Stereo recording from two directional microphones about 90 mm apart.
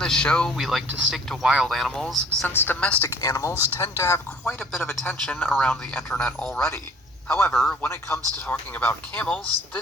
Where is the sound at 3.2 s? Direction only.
40° left (ahead or behind); by 5.7 s 20° left (ahead or behind).